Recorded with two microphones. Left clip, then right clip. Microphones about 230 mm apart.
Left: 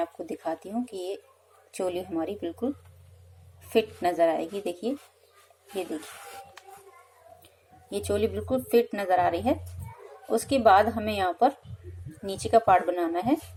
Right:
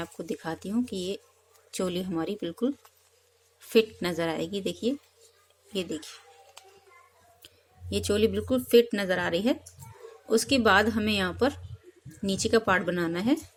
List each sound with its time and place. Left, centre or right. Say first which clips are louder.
0.0 s speech: left 4 dB; right
3.7 s speech: even; right
7.9 s speech: right 2 dB; right